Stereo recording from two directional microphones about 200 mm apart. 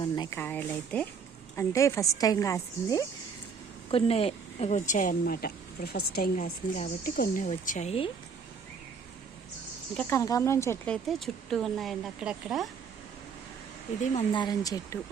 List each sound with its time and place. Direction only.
0.0 s speech: 20° left (ahead or behind)
0.3 s a woman's voice: 10° left (ahead or behind)
3.9 s a woman's voice: 30° left (ahead or behind)
10.0 s speech: 15° left (ahead or behind); by 12.6 s 5° right (ahead or behind)
14.0 s a woman's voice: 35° left (ahead or behind)
14.3 s a woman's voice: 20° left (ahead or behind)